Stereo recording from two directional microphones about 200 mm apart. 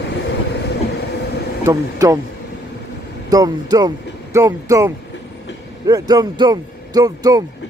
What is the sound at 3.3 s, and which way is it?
Speech, 20° right (ahead or behind).